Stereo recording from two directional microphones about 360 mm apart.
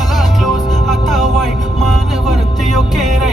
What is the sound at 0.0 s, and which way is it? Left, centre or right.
Music, centre.